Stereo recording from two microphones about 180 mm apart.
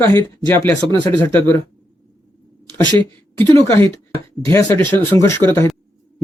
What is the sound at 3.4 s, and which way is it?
Speech, 10° left (ahead or behind).